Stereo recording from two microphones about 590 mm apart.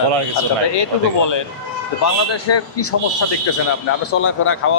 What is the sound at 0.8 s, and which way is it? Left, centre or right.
Speech, left.